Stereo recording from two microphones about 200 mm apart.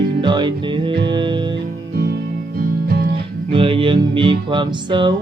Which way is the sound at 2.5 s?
45° right (ahead or behind).